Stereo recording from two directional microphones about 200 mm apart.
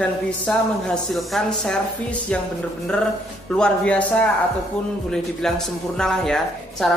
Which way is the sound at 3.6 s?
5° left (ahead or behind).